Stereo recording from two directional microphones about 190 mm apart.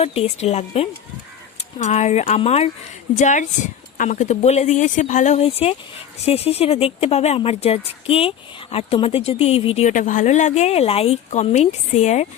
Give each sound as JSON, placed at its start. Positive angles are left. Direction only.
{"t": 0.0, "sound": "speech", "side_deg": 30}